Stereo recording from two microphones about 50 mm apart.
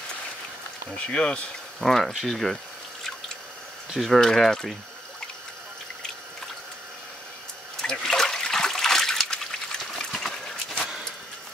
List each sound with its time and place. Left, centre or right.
0.8 s speech: left
1.8 s speech: centre
2.1 s a sound: centre
3.9 s speech: centre
4.2 s speech: centre
7.8 s toilet flush: centre